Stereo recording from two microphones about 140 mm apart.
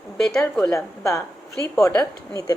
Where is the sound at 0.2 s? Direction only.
5° left (ahead or behind).